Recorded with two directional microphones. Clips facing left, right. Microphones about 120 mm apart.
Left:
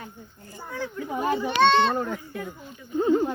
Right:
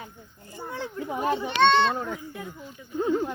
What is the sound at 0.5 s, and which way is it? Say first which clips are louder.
Speech: left 1 dB; 25° right (ahead or behind).